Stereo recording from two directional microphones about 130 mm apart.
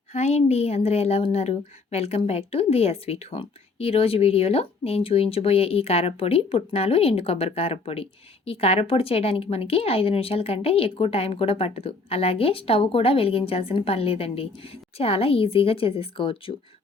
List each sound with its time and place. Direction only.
0.1 s speech: 55° left (ahead or behind)